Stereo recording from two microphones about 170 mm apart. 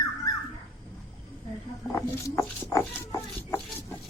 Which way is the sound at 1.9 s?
20° left (ahead or behind).